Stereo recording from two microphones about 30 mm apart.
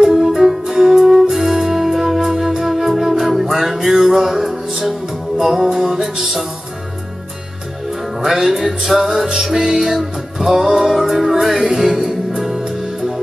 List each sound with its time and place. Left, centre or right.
0.0 s music: centre
8.2 s music: centre